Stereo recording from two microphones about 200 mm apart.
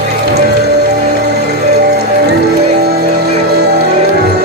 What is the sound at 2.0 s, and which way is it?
Music, 55° right (ahead or behind).